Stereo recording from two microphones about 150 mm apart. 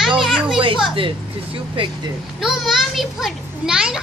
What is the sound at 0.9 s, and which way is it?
Speech, 35° right (ahead or behind).